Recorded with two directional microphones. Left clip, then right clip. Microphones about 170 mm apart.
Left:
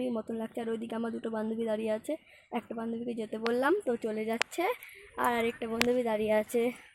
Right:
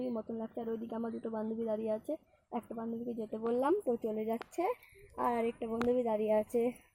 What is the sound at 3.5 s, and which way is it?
Speech, centre (ahead or behind).